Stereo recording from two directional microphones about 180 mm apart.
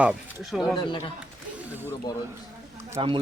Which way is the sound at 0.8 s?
25° left (ahead or behind).